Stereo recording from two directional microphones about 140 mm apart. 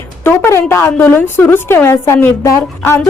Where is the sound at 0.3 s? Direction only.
15° left (ahead or behind).